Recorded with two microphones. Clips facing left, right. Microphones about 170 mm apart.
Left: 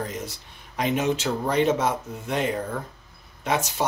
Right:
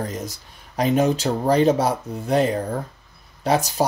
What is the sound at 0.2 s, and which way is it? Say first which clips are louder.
Speech: right 3 dB; 40° right (ahead or behind).